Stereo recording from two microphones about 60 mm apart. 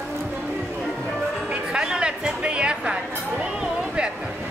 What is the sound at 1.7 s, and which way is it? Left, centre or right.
Music, centre.